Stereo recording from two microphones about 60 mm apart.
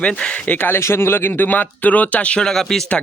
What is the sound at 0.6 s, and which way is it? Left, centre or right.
A man's voice, left.